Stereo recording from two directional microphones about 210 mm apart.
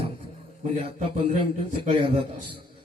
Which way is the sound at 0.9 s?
30° right (ahead or behind).